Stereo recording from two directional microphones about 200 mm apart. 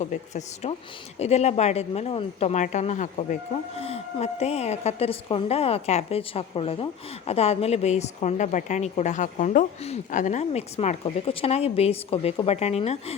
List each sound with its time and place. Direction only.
0.0 s a woman's voice: 35° left (ahead or behind)